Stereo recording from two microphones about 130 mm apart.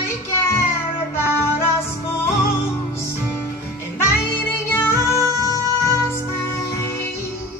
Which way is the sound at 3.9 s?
20° left (ahead or behind).